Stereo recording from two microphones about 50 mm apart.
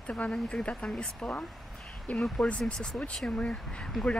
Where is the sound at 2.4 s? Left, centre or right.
Left.